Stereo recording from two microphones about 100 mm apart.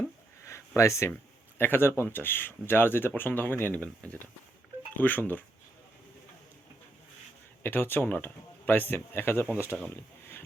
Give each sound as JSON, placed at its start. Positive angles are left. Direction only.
{"t": 0.8, "sound": "speech", "side_deg": 30}
{"t": 7.6, "sound": "speech", "side_deg": 20}
{"t": 9.9, "sound": "a sound", "side_deg": 25}